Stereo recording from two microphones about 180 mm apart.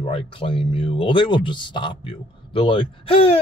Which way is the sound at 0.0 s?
30° left (ahead or behind).